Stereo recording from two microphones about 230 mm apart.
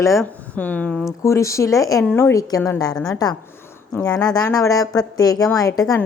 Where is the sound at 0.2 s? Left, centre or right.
Centre.